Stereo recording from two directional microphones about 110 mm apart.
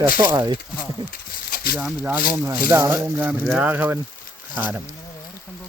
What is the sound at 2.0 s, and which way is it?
Speech, 15° right (ahead or behind).